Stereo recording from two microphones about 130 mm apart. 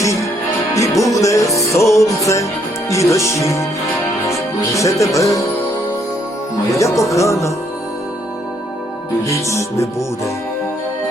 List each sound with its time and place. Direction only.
0.8 s music: 25° left (ahead or behind)
2.9 s speech: 25° left (ahead or behind)
6.7 s speech: 25° left (ahead or behind)
9.2 s speech: 25° left (ahead or behind)